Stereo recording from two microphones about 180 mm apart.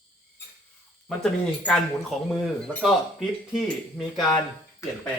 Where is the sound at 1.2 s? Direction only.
Centre (ahead or behind).